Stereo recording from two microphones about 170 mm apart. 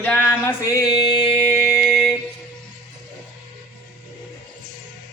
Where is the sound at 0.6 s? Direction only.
20° left (ahead or behind).